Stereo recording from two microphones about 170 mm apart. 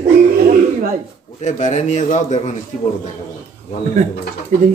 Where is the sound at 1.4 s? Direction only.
45° left (ahead or behind).